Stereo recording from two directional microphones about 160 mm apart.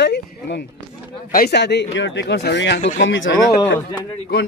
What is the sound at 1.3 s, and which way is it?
Speech, 75° left (ahead or behind).